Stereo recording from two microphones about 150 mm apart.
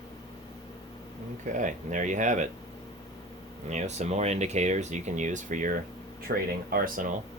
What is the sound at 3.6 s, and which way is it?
Speech, 50° right (ahead or behind).